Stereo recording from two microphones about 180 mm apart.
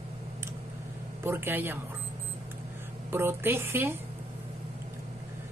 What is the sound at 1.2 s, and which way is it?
Speech, 15° right (ahead or behind).